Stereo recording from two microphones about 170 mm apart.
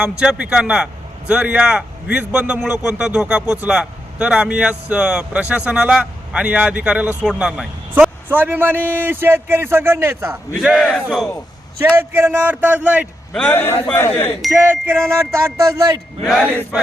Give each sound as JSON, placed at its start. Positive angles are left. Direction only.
{"t": 0.0, "sound": "a man's voice", "side_deg": -5}
{"t": 10.6, "sound": "a man's voice", "side_deg": 0}
{"t": 11.8, "sound": "a man's voice", "side_deg": -15}
{"t": 13.3, "sound": "a man's voice", "side_deg": 5}
{"t": 14.5, "sound": "a man's voice", "side_deg": -10}
{"t": 16.2, "sound": "a man's voice", "side_deg": -5}